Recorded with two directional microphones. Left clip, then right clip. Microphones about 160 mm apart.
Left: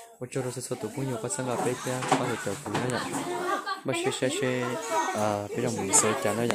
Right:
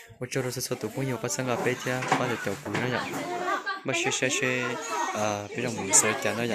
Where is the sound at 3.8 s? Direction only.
10° left (ahead or behind).